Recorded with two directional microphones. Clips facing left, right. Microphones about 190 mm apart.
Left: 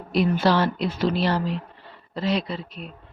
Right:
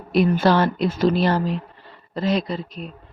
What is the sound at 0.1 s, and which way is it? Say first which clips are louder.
A woman's voice: right 3 dB; 50° right (ahead or behind).